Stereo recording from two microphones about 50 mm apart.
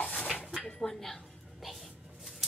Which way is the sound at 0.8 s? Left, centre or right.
Centre.